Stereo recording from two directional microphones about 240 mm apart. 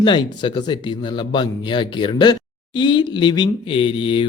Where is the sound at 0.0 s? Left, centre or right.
Centre.